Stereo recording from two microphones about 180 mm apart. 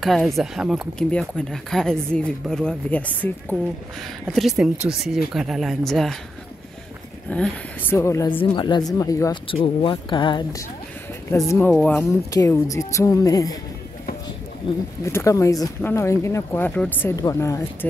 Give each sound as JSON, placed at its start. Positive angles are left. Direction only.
{"t": 0.0, "sound": "speech", "side_deg": 0}
{"t": 7.2, "sound": "speech", "side_deg": 5}
{"t": 8.3, "sound": "speech", "side_deg": 25}
{"t": 9.5, "sound": "speech", "side_deg": 30}
{"t": 15.0, "sound": "speech", "side_deg": 15}